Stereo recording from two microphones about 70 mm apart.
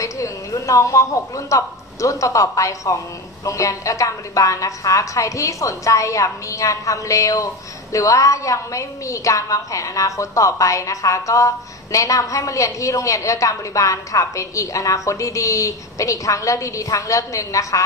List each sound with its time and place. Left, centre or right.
0.0 s a woman's voice: left